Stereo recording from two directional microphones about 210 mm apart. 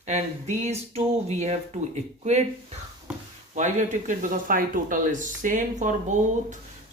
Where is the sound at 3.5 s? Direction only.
35° right (ahead or behind).